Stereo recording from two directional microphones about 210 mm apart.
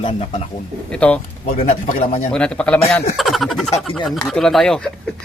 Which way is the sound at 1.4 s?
40° left (ahead or behind).